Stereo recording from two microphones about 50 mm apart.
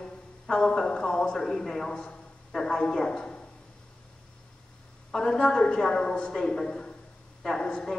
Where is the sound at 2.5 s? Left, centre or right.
Centre.